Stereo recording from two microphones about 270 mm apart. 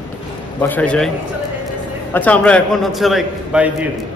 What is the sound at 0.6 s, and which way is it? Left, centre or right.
Speech, centre.